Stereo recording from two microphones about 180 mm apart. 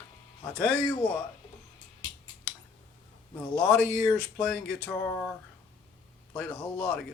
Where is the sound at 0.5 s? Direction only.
10° left (ahead or behind).